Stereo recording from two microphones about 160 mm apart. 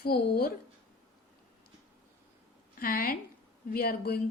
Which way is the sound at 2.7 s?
65° left (ahead or behind).